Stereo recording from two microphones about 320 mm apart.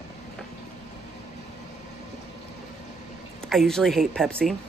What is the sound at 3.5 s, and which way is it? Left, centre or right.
A woman's voice, centre.